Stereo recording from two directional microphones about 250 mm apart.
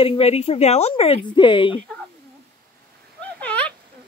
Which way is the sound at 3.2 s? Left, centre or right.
Centre.